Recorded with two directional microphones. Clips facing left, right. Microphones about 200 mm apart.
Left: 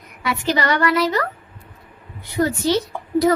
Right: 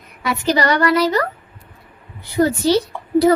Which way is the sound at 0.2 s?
40° right (ahead or behind).